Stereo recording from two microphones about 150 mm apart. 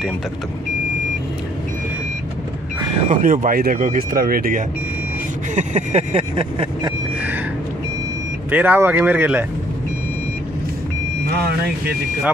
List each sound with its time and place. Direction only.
3.1 s speech: 65° right (ahead or behind)
5.5 s vehicle: 50° right (ahead or behind); by 6.9 s 35° right (ahead or behind)
8.5 s speech: 10° right (ahead or behind)